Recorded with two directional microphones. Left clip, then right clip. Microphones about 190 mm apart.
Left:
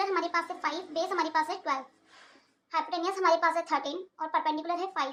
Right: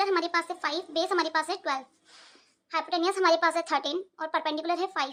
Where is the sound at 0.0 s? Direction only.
30° right (ahead or behind).